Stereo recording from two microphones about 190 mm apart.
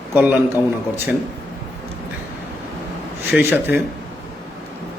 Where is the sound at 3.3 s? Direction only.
10° right (ahead or behind).